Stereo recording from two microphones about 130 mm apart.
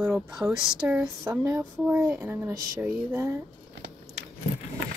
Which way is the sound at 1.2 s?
25° right (ahead or behind).